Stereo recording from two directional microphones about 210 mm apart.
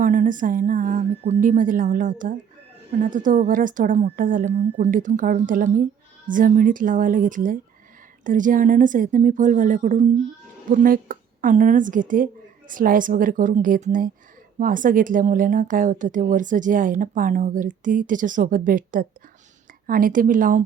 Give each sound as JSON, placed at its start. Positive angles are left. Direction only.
{"t": 0.0, "sound": "speech", "side_deg": -40}